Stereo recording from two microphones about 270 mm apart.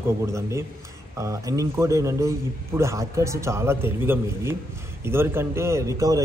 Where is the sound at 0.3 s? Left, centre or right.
Centre.